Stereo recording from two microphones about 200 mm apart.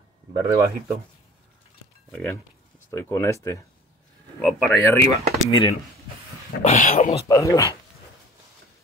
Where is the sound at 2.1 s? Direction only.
10° left (ahead or behind).